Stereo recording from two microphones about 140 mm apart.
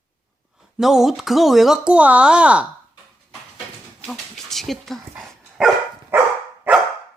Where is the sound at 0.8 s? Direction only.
Centre (ahead or behind).